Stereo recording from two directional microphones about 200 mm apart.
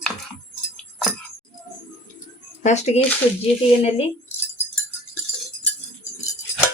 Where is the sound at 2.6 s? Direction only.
35° left (ahead or behind).